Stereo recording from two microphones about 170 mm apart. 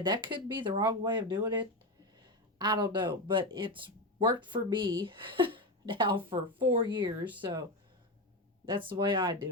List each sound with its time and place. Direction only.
0.0 s speech: 25° right (ahead or behind)
8.6 s speech: 30° right (ahead or behind)